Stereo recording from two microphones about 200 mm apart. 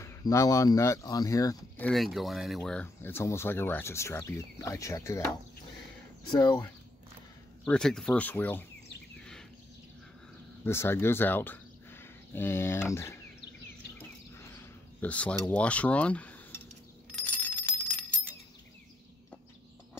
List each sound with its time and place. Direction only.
0.0 s speech: 15° left (ahead or behind)
1.9 s speech: centre (ahead or behind); by 6.6 s 20° left (ahead or behind)
7.6 s speech: 5° left (ahead or behind)
10.6 s speech: 10° left (ahead or behind)
13.9 s a sound: 10° left (ahead or behind)
17.1 s bicycle bell: 10° left (ahead or behind)